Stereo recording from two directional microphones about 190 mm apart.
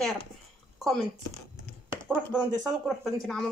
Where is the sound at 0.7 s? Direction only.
Centre (ahead or behind).